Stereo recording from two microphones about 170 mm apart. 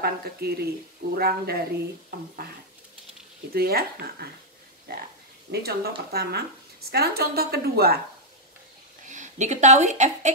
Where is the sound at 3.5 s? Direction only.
65° right (ahead or behind).